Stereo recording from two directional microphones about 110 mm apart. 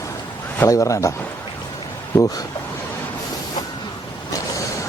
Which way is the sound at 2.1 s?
35° left (ahead or behind).